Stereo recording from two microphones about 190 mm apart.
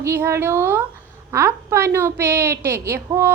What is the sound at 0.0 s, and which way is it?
A woman's voice, 15° right (ahead or behind).